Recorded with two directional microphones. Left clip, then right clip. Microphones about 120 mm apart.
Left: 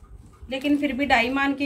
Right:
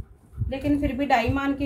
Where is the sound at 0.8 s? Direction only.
20° right (ahead or behind).